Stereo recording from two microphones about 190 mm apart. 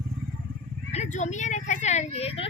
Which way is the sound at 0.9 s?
40° left (ahead or behind).